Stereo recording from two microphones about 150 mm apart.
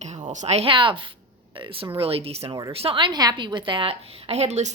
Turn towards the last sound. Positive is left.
turn(degrees=-50)  # may be behind; listen again after turning